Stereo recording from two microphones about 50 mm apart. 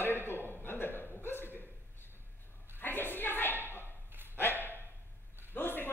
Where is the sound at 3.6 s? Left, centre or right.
Right.